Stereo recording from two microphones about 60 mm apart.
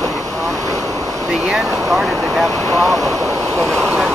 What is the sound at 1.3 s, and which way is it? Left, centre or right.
Speech, centre.